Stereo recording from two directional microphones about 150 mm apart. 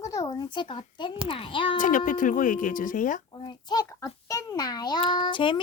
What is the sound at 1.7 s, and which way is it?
Speech, 60° left (ahead or behind).